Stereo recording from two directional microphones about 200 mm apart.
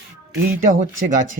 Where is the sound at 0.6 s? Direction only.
40° right (ahead or behind).